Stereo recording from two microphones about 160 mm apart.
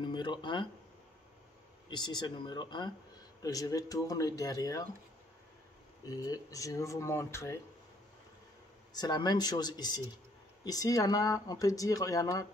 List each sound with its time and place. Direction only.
0.0 s a sound: 30° left (ahead or behind)
1.9 s speech: 25° left (ahead or behind)
6.0 s speech: 25° left (ahead or behind)
8.9 s speech: 25° left (ahead or behind)